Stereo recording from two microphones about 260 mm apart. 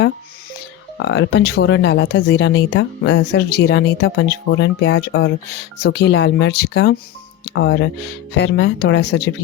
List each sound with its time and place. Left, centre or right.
0.9 s speech: left